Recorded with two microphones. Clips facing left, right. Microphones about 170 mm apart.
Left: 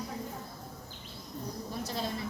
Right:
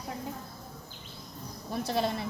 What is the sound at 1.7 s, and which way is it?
Speech, 65° right (ahead or behind).